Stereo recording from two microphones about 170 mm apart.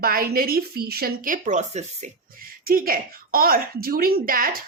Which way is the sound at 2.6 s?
60° right (ahead or behind).